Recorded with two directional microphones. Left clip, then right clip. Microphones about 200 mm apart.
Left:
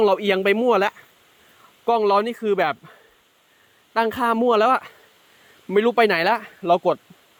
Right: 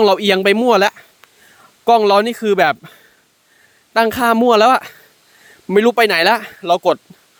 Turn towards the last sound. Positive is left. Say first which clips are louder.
# right 4 dB
turn(degrees=-50)  # may be behind; listen again after turning